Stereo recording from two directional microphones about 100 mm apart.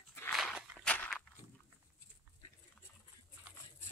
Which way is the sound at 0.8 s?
15° left (ahead or behind).